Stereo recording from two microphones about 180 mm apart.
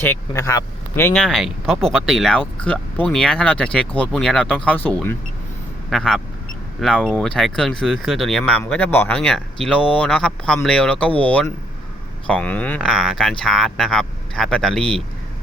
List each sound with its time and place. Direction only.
0.1 s speech: 15° left (ahead or behind)
1.1 s speech: centre (ahead or behind)